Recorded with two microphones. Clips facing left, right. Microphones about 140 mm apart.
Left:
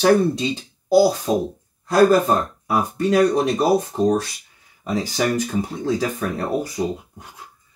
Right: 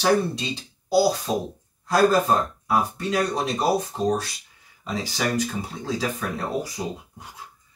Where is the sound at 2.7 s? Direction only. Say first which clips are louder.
Left 5 dB; 55° left (ahead or behind).